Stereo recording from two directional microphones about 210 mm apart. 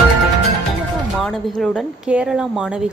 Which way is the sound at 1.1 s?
Centre (ahead or behind).